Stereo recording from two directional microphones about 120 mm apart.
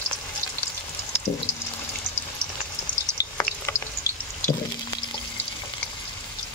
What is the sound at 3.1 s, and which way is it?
Frying, 25° left (ahead or behind).